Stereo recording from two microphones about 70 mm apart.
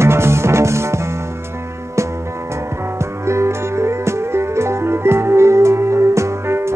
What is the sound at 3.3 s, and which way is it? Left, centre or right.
Music, right.